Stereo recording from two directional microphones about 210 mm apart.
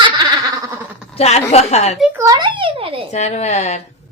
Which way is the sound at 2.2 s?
20° right (ahead or behind).